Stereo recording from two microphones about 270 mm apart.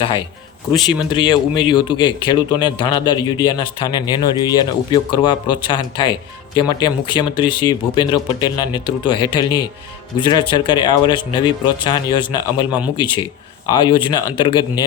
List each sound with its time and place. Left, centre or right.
0.9 s speech: centre